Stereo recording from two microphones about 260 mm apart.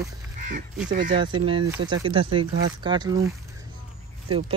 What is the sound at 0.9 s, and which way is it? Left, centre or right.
Speech, right.